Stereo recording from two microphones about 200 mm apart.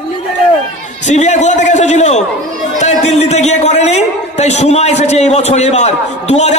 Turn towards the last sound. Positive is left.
turn(degrees=35)  # may be behind; listen again after turning